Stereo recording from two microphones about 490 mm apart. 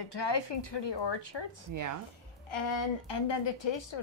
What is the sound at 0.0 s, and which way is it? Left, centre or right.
A woman's voice, left.